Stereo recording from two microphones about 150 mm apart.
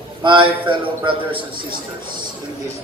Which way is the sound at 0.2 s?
35° right (ahead or behind).